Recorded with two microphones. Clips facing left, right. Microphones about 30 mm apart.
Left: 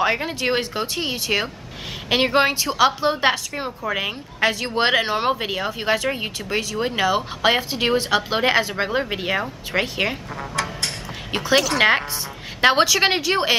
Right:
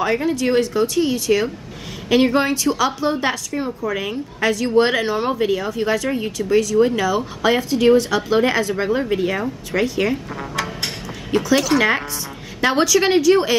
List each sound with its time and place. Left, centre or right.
0.0 s speech: left
10.3 s a sound: centre
11.5 s speech: centre
12.6 s speech: left